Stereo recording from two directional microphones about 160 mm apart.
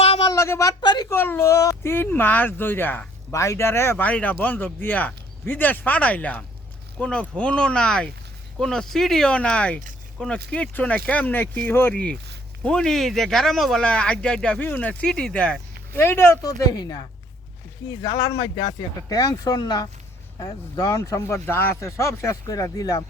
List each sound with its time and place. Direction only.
0.0 s a sound: 35° left (ahead or behind)
0.3 s a woman's voice: 20° left (ahead or behind)
1.1 s speech: 15° left (ahead or behind)
18.0 s speech: 25° left (ahead or behind)